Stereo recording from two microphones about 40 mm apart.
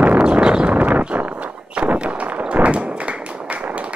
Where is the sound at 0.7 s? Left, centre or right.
Right.